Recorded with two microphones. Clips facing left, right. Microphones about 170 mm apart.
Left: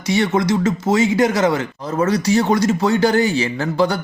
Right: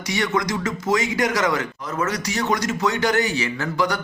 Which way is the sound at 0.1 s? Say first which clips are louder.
Left 6 dB; 30° left (ahead or behind).